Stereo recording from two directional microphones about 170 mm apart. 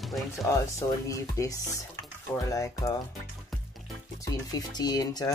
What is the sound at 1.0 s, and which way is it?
Speech, 20° left (ahead or behind).